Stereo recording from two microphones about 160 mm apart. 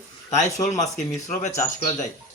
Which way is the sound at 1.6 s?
20° left (ahead or behind).